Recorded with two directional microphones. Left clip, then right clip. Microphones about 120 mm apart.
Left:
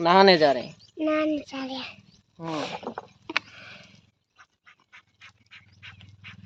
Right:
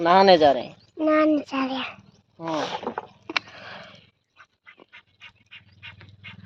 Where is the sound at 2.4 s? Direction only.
60° left (ahead or behind).